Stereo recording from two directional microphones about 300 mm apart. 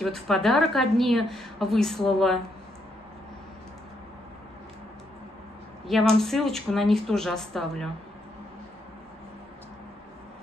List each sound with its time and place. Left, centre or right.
0.0 s a woman's voice: centre
5.9 s a woman's voice: centre